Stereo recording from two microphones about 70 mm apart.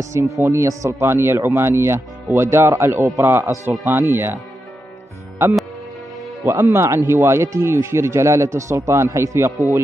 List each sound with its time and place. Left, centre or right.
0.0 s speech: right
6.4 s speech: right